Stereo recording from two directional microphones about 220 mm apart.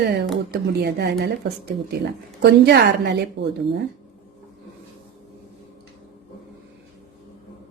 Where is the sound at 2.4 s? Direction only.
50° right (ahead or behind).